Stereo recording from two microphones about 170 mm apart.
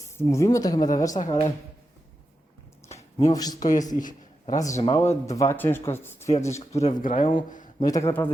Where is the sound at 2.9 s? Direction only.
40° left (ahead or behind).